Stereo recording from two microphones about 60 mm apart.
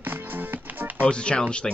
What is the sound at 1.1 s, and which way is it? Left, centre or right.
Speech, centre.